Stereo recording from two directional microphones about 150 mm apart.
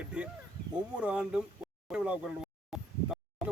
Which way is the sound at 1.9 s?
5° right (ahead or behind).